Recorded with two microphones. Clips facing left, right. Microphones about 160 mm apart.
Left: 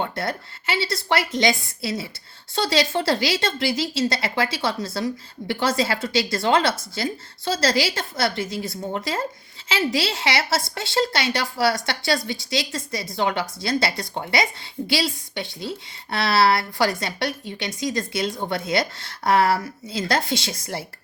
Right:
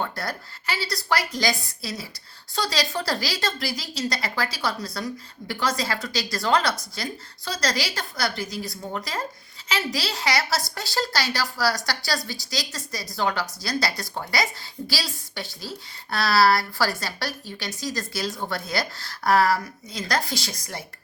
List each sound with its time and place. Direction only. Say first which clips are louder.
0.0 s speech: left 3 dB; 25° left (ahead or behind)